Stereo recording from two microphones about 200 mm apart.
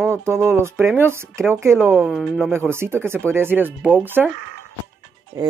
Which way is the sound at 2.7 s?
10° right (ahead or behind).